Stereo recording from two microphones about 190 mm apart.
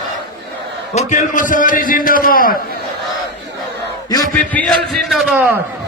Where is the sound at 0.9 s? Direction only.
40° left (ahead or behind).